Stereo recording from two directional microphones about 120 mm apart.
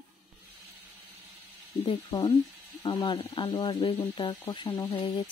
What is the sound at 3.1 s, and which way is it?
Speech, 50° left (ahead or behind).